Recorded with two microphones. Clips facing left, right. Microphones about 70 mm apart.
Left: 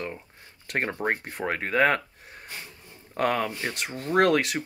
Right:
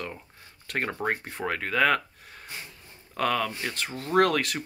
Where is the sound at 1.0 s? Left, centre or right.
Left.